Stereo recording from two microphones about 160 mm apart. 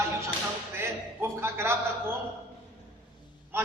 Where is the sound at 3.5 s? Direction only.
15° right (ahead or behind).